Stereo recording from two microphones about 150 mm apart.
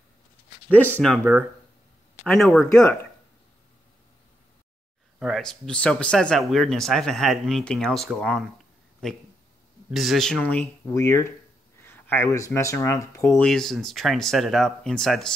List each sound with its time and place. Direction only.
0.7 s speech: 10° left (ahead or behind)
1.1 s speech: 5° right (ahead or behind)
5.2 s speech: centre (ahead or behind)
10.9 s speech: 20° left (ahead or behind)
13.4 s speech: 5° left (ahead or behind)